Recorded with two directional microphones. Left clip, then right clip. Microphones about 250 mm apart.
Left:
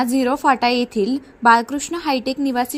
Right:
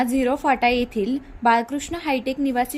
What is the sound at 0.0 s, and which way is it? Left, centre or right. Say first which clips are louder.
Speech: left 3 dB; centre.